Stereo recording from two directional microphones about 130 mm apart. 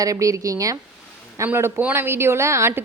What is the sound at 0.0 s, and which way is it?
A woman's voice, 25° right (ahead or behind).